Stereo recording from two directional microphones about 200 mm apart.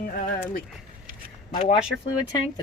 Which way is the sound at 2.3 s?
20° left (ahead or behind).